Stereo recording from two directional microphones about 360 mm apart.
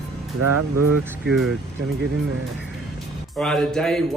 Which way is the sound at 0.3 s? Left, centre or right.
Right.